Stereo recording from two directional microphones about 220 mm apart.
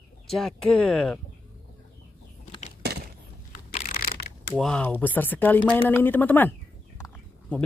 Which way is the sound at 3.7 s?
35° left (ahead or behind).